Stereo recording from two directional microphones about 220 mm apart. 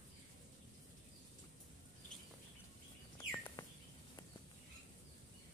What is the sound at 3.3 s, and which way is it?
Bird, 10° left (ahead or behind).